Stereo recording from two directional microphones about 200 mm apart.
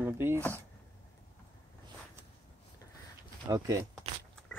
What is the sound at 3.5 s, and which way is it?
Speech, 15° right (ahead or behind).